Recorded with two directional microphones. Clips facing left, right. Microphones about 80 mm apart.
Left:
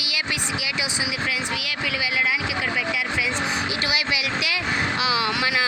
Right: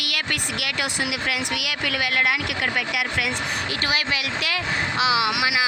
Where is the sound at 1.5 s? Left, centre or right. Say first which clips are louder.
Right 1 dB; right.